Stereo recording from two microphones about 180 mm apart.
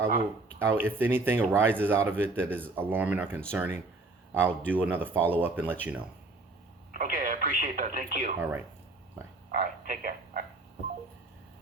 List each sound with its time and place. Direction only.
0.6 s speech: 10° right (ahead or behind)
6.9 s speech: 50° right (ahead or behind)
8.4 s speech: 10° right (ahead or behind)
9.6 s speech: 50° right (ahead or behind)